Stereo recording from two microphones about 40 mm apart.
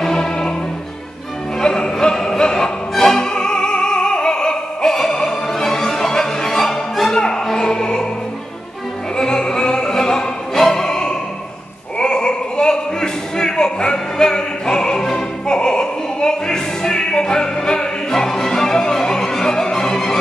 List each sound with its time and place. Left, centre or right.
0.0 s music: centre
1.6 s opera: centre
7.4 s music: centre
9.1 s opera: centre
10.6 s music: centre
12.0 s a sound: left